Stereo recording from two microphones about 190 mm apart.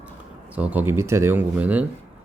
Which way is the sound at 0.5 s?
10° right (ahead or behind).